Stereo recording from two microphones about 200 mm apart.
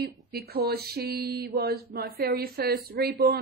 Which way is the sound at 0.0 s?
50° right (ahead or behind).